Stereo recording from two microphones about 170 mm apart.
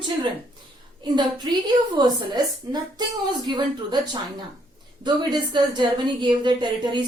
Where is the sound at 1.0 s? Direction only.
25° right (ahead or behind).